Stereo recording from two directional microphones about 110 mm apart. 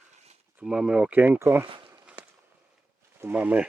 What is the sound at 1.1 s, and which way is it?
Speech, 15° right (ahead or behind).